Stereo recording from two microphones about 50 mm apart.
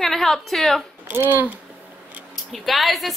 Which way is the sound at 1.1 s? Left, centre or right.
Right.